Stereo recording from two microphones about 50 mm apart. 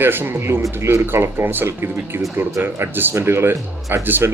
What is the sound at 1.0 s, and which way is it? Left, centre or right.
Speech, right.